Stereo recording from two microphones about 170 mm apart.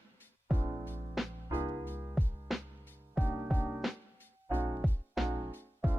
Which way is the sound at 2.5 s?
Centre (ahead or behind).